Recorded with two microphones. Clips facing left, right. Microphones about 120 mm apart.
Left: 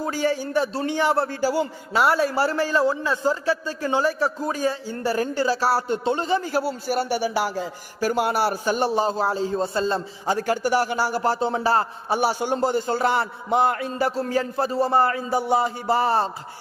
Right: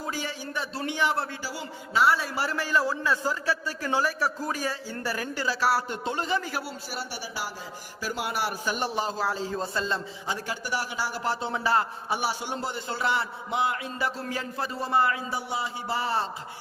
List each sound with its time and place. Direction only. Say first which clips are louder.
0.0 s a man's voice: left 10 dB; 40° left (ahead or behind)
6.8 s a man's voice: left 13 dB; 55° left (ahead or behind)
8.1 s a man's voice: left 7 dB; 45° left (ahead or behind)